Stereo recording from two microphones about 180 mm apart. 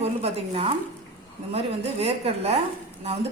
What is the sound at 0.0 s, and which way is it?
A woman's voice, 35° right (ahead or behind).